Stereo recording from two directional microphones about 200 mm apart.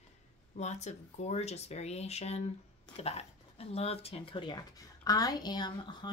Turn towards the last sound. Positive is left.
turn(degrees=20)  # may be behind; listen again after turning